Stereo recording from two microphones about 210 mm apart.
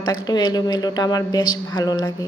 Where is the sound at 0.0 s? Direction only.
20° left (ahead or behind).